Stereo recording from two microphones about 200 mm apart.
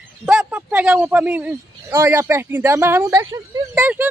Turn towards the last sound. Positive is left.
turn(degrees=-10)  # may be behind; listen again after turning